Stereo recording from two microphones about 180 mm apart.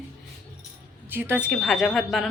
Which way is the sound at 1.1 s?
10° right (ahead or behind).